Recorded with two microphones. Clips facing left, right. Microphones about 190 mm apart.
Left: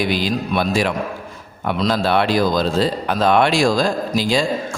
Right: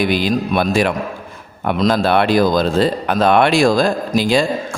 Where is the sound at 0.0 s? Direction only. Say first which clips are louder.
Right 3 dB; 55° right (ahead or behind).